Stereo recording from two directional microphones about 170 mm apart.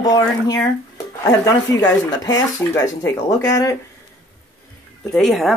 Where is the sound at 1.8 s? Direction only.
20° left (ahead or behind).